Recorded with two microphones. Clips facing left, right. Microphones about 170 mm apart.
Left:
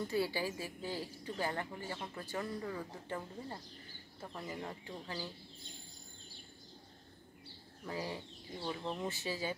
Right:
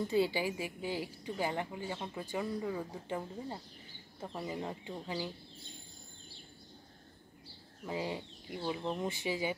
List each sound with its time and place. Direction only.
0.1 s a woman's voice: 20° right (ahead or behind)
7.8 s a woman's voice: 20° right (ahead or behind)